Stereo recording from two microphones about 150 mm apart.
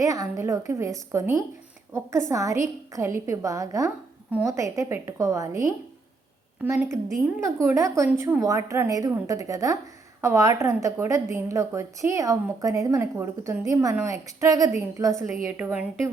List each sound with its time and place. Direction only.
0.0 s a woman's voice: 20° right (ahead or behind)
7.4 s a woman's voice: 20° right (ahead or behind)